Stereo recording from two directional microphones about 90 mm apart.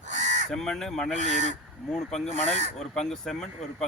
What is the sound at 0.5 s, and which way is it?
Speech, 5° left (ahead or behind).